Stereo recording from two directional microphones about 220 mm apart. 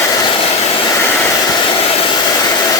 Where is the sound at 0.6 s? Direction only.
25° left (ahead or behind).